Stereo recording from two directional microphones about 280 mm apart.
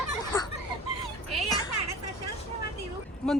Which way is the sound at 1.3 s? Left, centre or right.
Centre.